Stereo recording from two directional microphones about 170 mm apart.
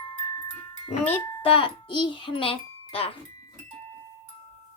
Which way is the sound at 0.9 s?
35° left (ahead or behind).